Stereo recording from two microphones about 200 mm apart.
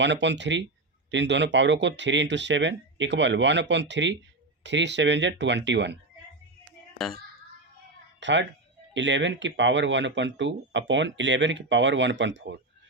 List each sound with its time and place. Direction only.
0.0 s speech: 60° right (ahead or behind)
8.2 s speech: 65° right (ahead or behind)